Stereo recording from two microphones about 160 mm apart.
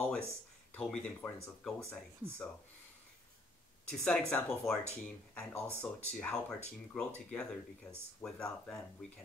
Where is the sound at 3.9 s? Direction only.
5° left (ahead or behind).